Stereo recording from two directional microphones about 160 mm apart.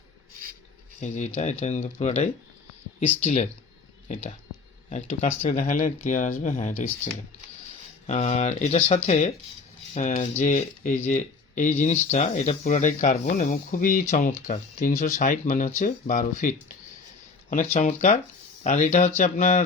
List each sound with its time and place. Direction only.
0.9 s speech: 50° left (ahead or behind)